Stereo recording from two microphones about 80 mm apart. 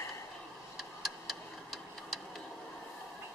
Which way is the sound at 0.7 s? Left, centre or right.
Centre.